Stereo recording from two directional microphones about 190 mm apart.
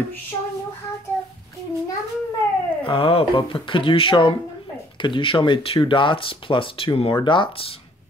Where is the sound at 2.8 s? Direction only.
30° left (ahead or behind).